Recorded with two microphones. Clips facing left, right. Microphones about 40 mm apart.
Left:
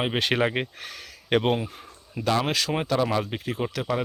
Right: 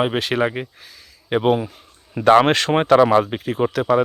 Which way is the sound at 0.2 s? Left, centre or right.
Centre.